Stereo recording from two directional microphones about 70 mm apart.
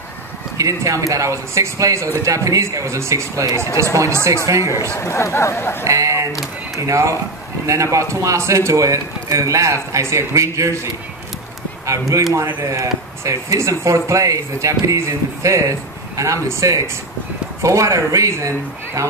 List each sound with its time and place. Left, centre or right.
0.6 s speech: right
4.8 s speech: left
5.9 s speech: right
11.8 s speech: right